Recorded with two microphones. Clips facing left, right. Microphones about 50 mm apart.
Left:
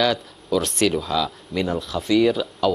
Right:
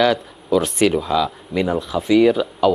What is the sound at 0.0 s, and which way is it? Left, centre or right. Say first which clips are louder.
Speech: right 4 dB; centre.